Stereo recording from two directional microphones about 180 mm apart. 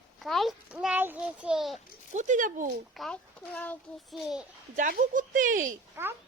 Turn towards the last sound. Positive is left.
turn(degrees=-10)  # may be behind; listen again after turning